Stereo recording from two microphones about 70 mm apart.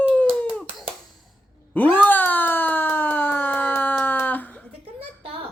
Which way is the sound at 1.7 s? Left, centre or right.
Left.